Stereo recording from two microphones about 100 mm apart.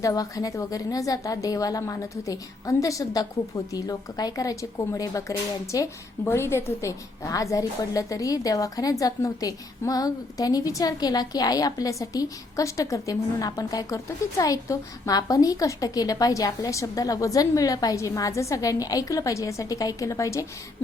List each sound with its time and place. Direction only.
0.0 s a woman's voice: 35° left (ahead or behind)